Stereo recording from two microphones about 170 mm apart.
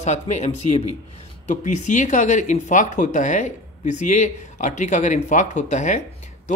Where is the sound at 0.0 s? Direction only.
45° left (ahead or behind).